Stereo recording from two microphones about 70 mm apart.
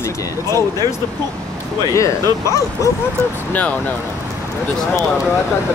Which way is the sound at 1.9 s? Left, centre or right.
Left.